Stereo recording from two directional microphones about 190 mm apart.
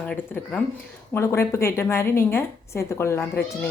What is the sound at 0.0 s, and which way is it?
A woman's voice, 5° left (ahead or behind).